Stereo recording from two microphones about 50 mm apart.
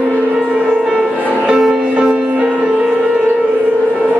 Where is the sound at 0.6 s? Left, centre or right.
Centre; by 2.9 s right.